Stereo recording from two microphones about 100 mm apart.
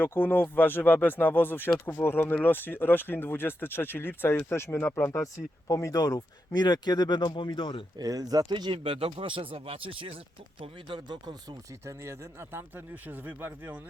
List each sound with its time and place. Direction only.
0.0 s speech: 20° left (ahead or behind); by 7.9 s 60° left (ahead or behind)
7.9 s speech: 40° right (ahead or behind)
11.9 s speech: 30° right (ahead or behind)